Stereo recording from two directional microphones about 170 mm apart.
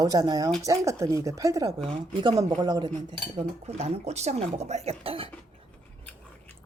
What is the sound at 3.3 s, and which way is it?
Speech, 40° right (ahead or behind).